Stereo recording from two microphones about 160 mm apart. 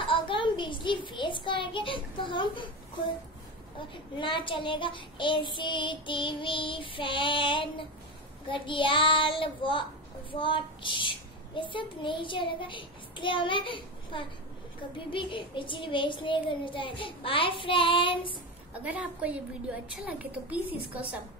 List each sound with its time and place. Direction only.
0.0 s child singing: 30° left (ahead or behind)
3.9 s child singing: 30° left (ahead or behind)
18.7 s a woman's voice: 10° right (ahead or behind)